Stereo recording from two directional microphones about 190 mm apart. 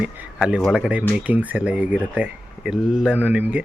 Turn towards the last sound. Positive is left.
turn(degrees=-5)  # may be behind; listen again after turning